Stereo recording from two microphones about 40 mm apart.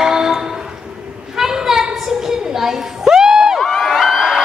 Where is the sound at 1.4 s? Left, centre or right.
Centre.